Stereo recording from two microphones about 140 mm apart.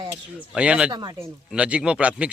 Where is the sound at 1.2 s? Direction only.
5° right (ahead or behind).